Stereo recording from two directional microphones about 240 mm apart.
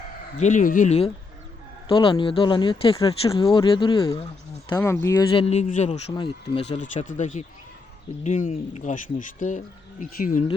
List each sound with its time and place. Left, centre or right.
0.3 s speech: left
4.7 s speech: centre; by 10.4 s left